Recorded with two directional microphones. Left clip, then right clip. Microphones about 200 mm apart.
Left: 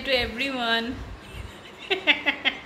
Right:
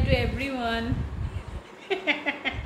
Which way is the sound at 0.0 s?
Centre (ahead or behind).